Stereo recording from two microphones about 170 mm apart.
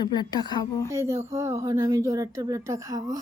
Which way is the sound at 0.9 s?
15° right (ahead or behind).